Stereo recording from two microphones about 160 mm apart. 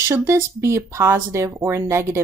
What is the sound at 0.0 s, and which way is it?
Speech, 15° right (ahead or behind).